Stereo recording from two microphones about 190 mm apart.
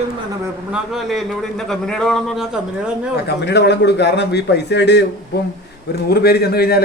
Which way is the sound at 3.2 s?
65° left (ahead or behind).